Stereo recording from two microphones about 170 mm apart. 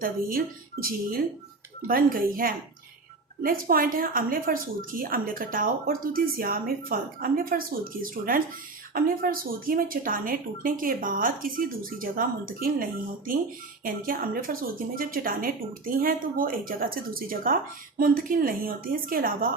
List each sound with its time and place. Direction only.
0.0 s a woman's voice: 60° right (ahead or behind)
13.8 s a woman's voice: 55° right (ahead or behind)